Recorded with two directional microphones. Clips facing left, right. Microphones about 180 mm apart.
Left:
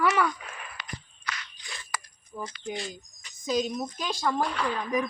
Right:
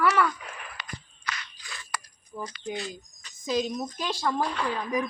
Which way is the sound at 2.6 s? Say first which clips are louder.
Right 1 dB; 35° right (ahead or behind).